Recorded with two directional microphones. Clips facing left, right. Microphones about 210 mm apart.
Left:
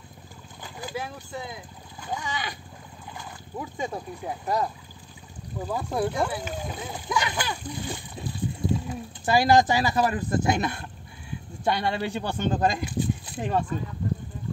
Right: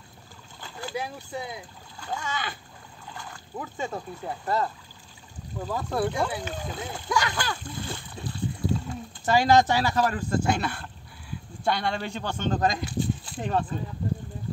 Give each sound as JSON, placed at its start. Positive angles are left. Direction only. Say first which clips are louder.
{"t": 0.6, "sound": "boat", "louder": "even", "side_deg": 15}
{"t": 1.3, "sound": "speech", "louder": "right 2 dB", "side_deg": -15}
{"t": 2.0, "sound": "speech", "louder": "even", "side_deg": 15}
{"t": 3.5, "sound": "speech", "louder": "left 1 dB", "side_deg": 15}